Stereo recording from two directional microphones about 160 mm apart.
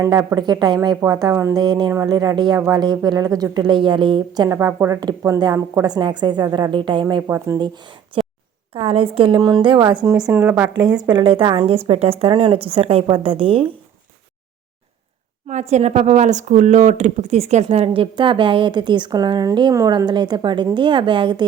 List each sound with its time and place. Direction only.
0.0 s a woman's voice: 20° right (ahead or behind)
4.4 s a woman's voice: 15° right (ahead or behind)
7.2 s speech: 15° right (ahead or behind)
8.7 s a woman's voice: 35° right (ahead or behind)
10.2 s speech: 10° right (ahead or behind)
11.0 s a woman's voice: 30° right (ahead or behind)
15.4 s a woman's voice: 45° right (ahead or behind); by 21.4 s 30° right (ahead or behind)